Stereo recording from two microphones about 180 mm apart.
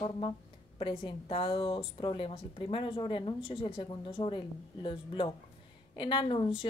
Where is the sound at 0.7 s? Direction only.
30° left (ahead or behind).